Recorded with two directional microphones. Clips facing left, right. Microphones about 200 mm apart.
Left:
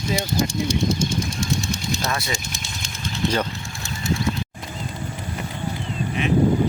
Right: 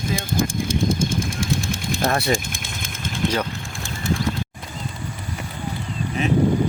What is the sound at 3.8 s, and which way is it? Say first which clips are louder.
Bird: right 1 dB; 50° right (ahead or behind).